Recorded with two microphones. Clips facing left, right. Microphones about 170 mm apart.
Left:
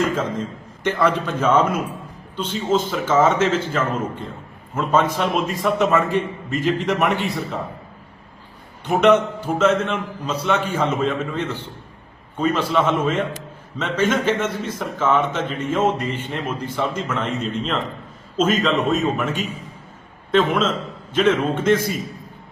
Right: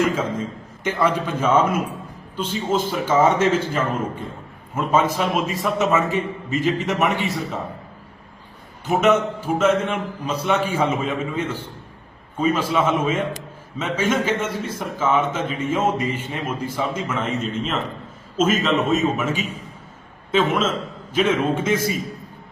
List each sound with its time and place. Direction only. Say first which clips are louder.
0.0 s a man's voice: even; 10° right (ahead or behind)
4.7 s a man's voice: even; 10° right (ahead or behind)
8.9 s a man's voice: left 2 dB; 5° right (ahead or behind)